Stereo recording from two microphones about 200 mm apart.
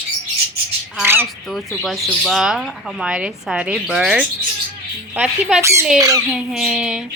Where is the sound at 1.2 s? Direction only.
Centre (ahead or behind).